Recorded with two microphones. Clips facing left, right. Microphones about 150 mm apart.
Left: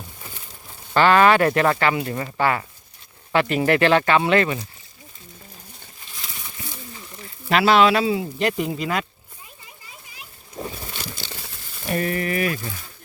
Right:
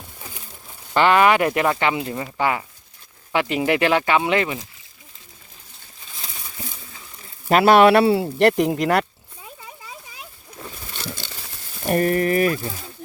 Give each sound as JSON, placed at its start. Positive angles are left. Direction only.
{"t": 0.9, "sound": "speech", "side_deg": -20}
{"t": 7.5, "sound": "speech", "side_deg": -50}
{"t": 11.9, "sound": "speech", "side_deg": -45}